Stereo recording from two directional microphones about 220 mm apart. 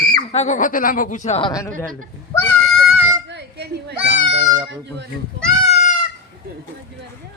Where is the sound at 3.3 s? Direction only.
50° right (ahead or behind).